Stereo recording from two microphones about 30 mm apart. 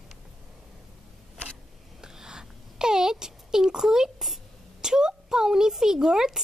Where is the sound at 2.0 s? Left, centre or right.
Right.